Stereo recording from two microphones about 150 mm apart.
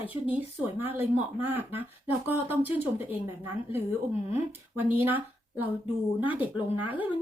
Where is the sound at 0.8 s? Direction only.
15° right (ahead or behind).